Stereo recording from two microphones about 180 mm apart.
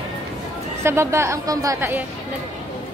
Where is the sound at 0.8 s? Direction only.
15° right (ahead or behind).